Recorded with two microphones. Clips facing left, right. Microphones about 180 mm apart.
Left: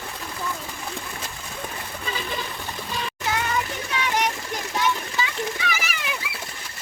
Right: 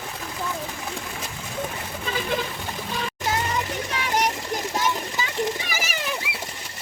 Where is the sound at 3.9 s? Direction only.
40° right (ahead or behind).